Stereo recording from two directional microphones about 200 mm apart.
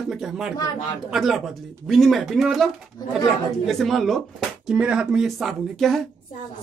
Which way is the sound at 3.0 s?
20° left (ahead or behind).